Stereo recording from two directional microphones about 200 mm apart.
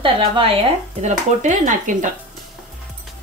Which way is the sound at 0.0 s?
25° right (ahead or behind).